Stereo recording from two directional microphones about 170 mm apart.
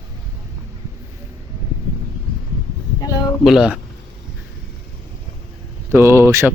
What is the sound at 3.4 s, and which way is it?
Speech, centre (ahead or behind).